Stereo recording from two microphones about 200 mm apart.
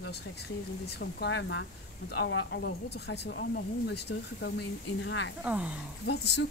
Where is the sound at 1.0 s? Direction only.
55° left (ahead or behind).